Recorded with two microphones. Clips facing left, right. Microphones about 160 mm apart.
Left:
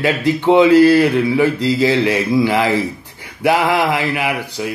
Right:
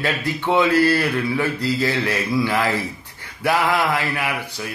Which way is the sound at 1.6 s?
90° left.